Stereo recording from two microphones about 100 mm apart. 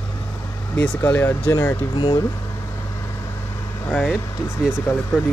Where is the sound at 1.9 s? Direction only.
55° left (ahead or behind).